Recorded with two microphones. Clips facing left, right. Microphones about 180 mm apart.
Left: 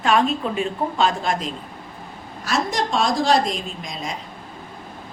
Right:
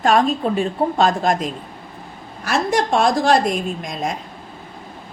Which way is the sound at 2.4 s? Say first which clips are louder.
Right 4 dB; 60° right (ahead or behind).